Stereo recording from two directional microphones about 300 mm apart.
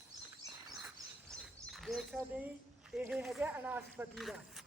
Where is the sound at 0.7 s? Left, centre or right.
Centre.